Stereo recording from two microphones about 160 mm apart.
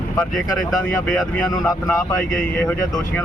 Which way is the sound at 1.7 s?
20° left (ahead or behind).